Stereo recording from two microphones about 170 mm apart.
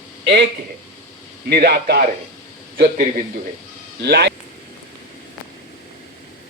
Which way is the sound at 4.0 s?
85° right.